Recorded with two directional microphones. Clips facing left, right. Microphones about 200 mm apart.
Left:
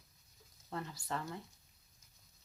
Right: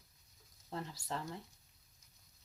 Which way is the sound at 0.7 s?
25° right (ahead or behind).